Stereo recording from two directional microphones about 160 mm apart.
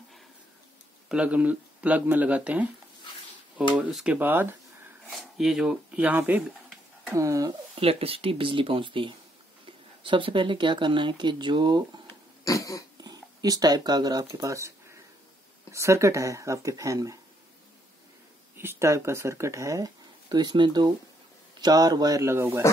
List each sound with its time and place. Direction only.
1.0 s speech: 5° right (ahead or behind)
3.7 s speech: 5° right (ahead or behind)
7.2 s speech: 20° right (ahead or behind)
7.7 s speech: 35° right (ahead or behind)
12.4 s dog: 20° left (ahead or behind)
13.0 s speech: 25° right (ahead or behind)
18.6 s speech: 15° right (ahead or behind)